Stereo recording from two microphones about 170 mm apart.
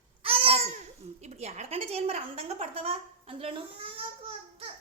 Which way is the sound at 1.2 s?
40° right (ahead or behind).